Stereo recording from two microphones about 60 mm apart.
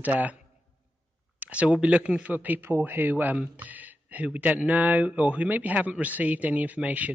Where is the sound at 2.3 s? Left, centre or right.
Right.